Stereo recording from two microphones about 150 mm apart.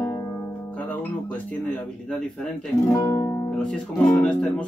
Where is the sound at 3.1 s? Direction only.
20° left (ahead or behind).